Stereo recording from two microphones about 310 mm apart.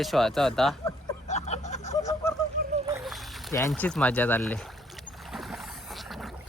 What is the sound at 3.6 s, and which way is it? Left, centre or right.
Speech, centre.